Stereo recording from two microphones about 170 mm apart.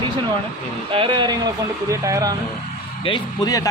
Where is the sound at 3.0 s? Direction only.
25° left (ahead or behind).